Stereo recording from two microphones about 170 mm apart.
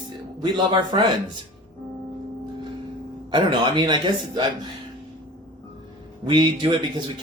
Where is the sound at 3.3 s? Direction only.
25° right (ahead or behind).